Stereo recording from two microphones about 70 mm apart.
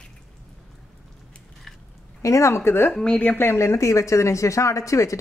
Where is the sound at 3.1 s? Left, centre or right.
Left.